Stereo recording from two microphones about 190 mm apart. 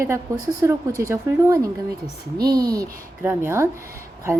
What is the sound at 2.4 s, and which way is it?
Speech, 55° right (ahead or behind).